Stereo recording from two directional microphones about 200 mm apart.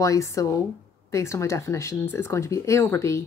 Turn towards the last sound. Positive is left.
turn(degrees=15)  # may be behind; listen again after turning